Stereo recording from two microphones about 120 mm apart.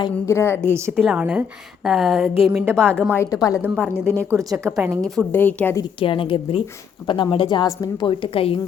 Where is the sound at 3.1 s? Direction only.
25° left (ahead or behind).